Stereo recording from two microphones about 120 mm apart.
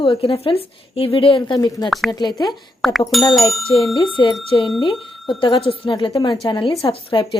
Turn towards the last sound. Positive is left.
turn(degrees=50)  # may be behind; listen again after turning